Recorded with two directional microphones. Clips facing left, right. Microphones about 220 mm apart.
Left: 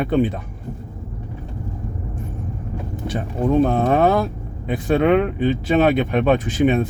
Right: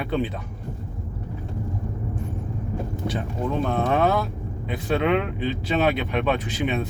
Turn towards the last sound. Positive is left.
turn(degrees=50)  # may be behind; listen again after turning